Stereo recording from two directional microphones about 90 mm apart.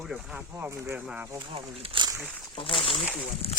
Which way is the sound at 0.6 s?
30° right (ahead or behind).